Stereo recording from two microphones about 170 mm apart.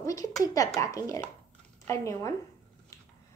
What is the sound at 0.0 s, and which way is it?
Speech, 20° left (ahead or behind).